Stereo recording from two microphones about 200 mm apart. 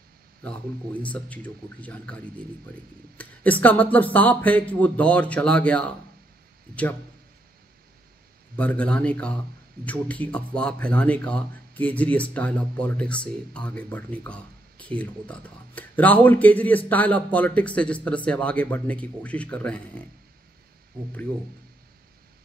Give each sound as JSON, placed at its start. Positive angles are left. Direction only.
{"t": 1.0, "sound": "speech", "side_deg": 5}
{"t": 3.2, "sound": "speech", "side_deg": 10}
{"t": 8.5, "sound": "speech", "side_deg": 5}